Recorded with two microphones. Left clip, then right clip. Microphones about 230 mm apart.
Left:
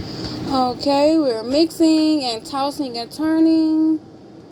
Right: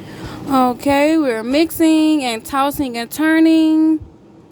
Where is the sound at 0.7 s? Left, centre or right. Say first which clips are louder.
Right 2 dB; right.